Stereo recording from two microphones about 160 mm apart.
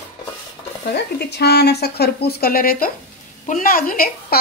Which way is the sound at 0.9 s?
90° left.